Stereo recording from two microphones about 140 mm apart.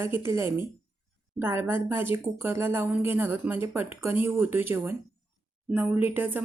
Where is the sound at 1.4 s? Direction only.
15° right (ahead or behind).